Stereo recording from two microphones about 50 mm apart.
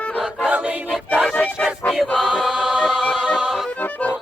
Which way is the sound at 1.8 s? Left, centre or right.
Left.